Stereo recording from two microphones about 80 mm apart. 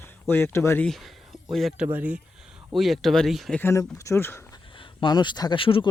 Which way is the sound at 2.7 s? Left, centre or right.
Centre.